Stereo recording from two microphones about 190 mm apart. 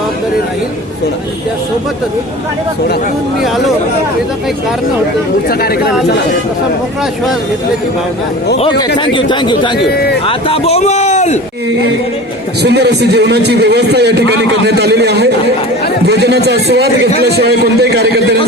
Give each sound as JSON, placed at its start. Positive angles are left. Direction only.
{"t": 9.0, "sound": "speech", "side_deg": 25}
{"t": 9.7, "sound": "a man's voice", "side_deg": 60}
{"t": 10.2, "sound": "a man's voice", "side_deg": 30}
{"t": 12.6, "sound": "speech", "side_deg": -60}